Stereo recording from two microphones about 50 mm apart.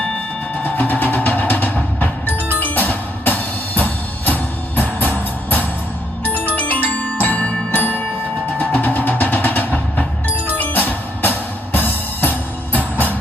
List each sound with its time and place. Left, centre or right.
0.6 s music: left
6.3 s music: right
6.6 s music: left